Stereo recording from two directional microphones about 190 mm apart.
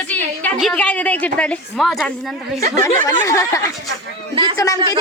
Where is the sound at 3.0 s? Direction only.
15° left (ahead or behind).